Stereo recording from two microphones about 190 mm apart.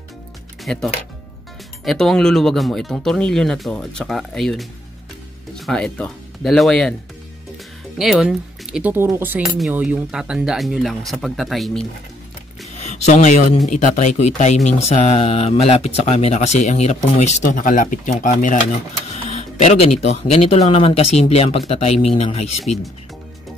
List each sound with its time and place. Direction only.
0.7 s speech: 5° left (ahead or behind)
5.7 s speech: 5° left (ahead or behind)
8.0 s speech: centre (ahead or behind)
12.7 s speech: 35° left (ahead or behind)
19.6 s speech: 35° left (ahead or behind)